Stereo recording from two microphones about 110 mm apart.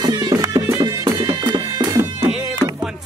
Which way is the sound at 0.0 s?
35° right (ahead or behind).